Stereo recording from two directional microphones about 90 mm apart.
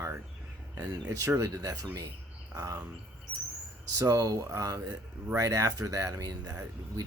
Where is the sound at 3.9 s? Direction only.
40° right (ahead or behind).